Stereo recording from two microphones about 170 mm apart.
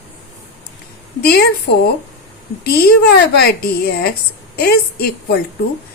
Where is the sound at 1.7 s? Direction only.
80° left.